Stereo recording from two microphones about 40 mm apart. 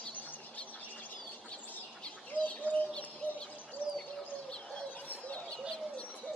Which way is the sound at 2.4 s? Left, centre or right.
Left.